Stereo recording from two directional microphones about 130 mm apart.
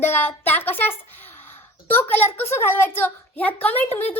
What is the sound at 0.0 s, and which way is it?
A woman's voice, 15° left (ahead or behind).